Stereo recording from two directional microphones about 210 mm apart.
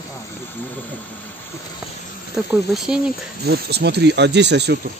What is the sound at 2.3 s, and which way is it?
Speech, 5° right (ahead or behind).